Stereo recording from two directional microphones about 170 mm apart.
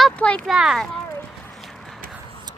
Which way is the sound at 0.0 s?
5° left (ahead or behind).